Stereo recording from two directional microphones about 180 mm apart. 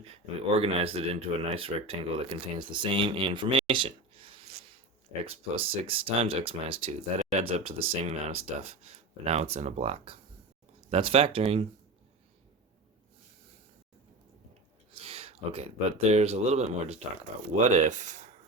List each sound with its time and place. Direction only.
0.0 s speech: 35° right (ahead or behind)
15.0 s speech: 35° right (ahead or behind)